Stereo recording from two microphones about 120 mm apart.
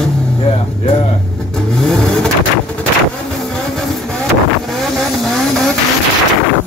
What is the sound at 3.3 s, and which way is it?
Vehicle, 5° left (ahead or behind).